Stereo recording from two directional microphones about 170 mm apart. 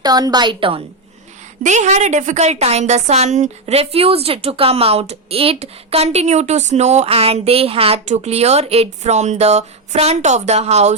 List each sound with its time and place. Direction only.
0.0 s a woman's voice: 25° right (ahead or behind)
1.6 s a woman's voice: 45° right (ahead or behind)